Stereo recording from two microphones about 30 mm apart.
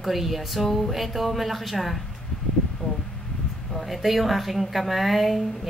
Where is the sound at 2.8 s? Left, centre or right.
Left.